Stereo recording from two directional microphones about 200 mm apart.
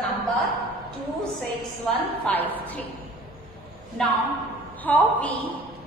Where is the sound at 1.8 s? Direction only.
10° left (ahead or behind).